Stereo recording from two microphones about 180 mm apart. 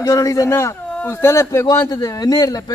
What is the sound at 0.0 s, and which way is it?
Speech, 20° left (ahead or behind).